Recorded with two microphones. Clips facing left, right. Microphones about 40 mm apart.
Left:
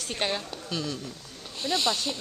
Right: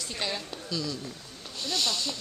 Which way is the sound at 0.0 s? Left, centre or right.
Left.